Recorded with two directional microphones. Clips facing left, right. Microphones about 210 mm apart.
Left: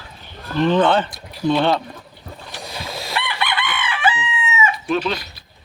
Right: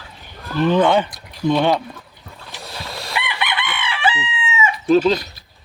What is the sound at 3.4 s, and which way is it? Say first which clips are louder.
Chicken: left 1 dB; 20° right (ahead or behind).